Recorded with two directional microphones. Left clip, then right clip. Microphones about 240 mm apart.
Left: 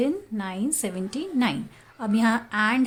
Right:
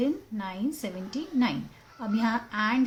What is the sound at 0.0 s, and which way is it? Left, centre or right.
A woman's voice, left.